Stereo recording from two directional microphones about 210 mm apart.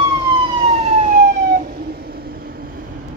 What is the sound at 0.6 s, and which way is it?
Emergency vehicle, 30° right (ahead or behind).